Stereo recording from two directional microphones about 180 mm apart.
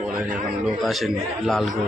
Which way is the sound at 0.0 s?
5° right (ahead or behind).